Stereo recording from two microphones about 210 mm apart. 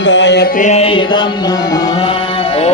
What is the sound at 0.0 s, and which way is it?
Music, 60° left (ahead or behind).